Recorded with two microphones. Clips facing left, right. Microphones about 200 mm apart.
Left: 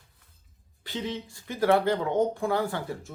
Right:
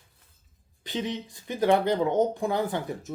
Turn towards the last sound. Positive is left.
turn(degrees=-20)  # may be behind; listen again after turning